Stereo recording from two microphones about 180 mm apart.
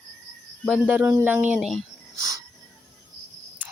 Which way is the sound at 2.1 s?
20° right (ahead or behind).